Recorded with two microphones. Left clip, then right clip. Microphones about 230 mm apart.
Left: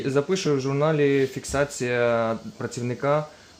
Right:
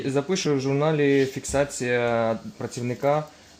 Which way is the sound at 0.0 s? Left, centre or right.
Centre.